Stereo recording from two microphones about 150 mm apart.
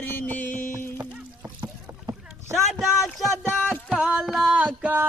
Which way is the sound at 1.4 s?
30° right (ahead or behind).